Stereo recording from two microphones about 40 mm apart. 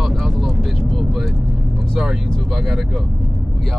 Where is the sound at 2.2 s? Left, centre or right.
Centre.